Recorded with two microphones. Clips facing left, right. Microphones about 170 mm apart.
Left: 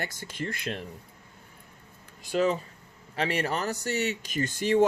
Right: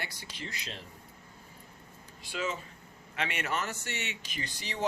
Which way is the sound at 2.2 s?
40° left (ahead or behind).